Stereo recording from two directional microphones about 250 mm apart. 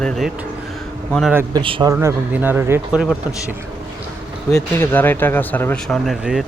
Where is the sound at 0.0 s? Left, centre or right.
Centre.